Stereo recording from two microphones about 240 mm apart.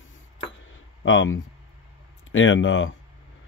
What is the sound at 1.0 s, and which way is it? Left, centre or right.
Speech, left.